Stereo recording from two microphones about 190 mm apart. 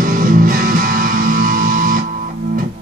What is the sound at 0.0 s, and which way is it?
Music, 45° right (ahead or behind).